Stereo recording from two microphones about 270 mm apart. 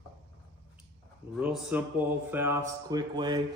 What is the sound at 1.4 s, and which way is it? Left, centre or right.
Speech, centre.